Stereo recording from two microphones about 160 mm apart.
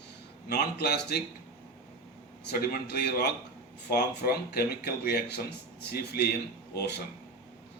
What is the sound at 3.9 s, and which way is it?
Speech, 75° left (ahead or behind).